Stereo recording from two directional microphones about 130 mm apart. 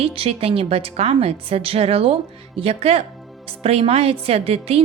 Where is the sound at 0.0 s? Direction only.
45° right (ahead or behind).